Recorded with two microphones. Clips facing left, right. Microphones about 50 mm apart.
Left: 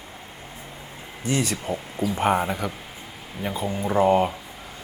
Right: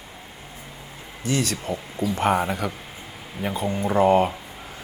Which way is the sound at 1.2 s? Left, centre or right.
Centre.